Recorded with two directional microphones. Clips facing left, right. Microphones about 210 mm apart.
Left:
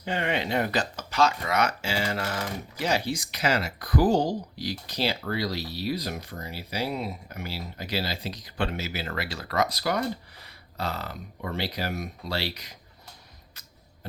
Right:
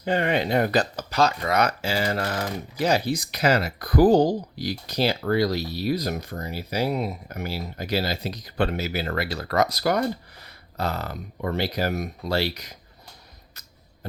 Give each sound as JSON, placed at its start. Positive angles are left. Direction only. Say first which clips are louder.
{"t": 0.0, "sound": "speech", "louder": "right 5 dB", "side_deg": -40}